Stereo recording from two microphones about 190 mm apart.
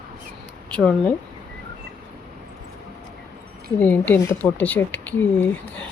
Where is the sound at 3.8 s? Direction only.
10° left (ahead or behind).